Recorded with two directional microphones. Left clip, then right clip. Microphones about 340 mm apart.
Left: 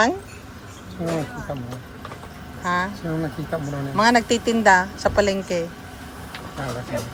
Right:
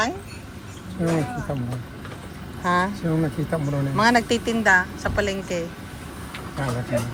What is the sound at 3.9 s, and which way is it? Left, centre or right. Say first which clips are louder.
Speech: left 2 dB; centre.